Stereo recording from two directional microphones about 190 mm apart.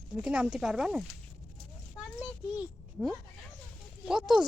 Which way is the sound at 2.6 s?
Centre (ahead or behind).